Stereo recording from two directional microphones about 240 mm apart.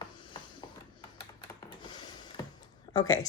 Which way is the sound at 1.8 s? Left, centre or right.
Centre.